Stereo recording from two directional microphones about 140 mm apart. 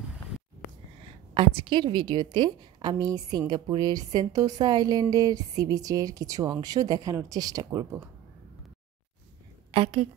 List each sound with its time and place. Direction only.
1.3 s a woman's voice: 40° right (ahead or behind)
9.7 s a woman's voice: 40° right (ahead or behind)